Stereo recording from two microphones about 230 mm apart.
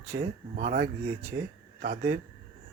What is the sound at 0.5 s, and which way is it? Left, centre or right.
Speech, right.